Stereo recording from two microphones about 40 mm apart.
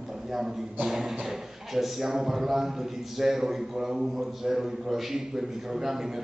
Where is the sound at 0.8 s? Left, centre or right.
Centre.